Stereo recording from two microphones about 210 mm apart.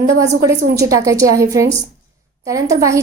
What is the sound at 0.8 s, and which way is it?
A woman's voice, 15° right (ahead or behind).